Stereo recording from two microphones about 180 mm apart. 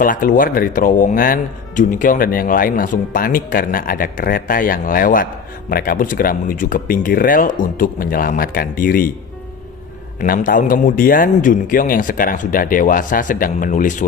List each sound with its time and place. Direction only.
0.0 s speech: 50° left (ahead or behind)
10.2 s speech: 50° left (ahead or behind)